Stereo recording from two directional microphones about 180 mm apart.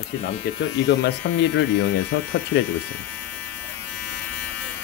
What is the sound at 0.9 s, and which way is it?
Speech, 85° left.